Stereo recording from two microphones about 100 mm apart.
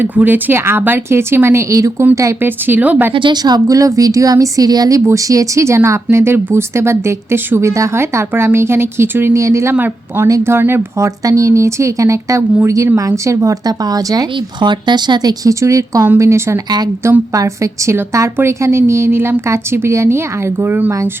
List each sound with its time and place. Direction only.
0.0 s speech: 15° right (ahead or behind)
2.4 s speech: 20° right (ahead or behind)
3.1 s speech: 55° right (ahead or behind); by 9.7 s 30° right (ahead or behind)
9.7 s speech: 20° right (ahead or behind)
10.2 s speech: 30° right (ahead or behind)
14.3 s speech: 50° right (ahead or behind); by 16.6 s 30° right (ahead or behind)
16.6 s speech: 45° right (ahead or behind)
17.0 s speech: 30° right (ahead or behind)